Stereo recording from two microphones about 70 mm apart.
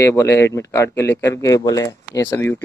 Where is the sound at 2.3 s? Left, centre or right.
Left.